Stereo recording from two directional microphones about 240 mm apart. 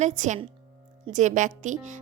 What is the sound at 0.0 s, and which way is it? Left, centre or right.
A woman's voice, right.